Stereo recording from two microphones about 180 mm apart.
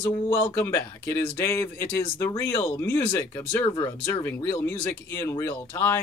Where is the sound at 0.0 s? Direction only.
15° left (ahead or behind).